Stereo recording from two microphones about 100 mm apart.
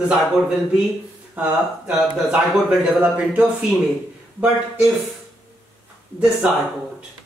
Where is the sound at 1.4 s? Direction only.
15° right (ahead or behind).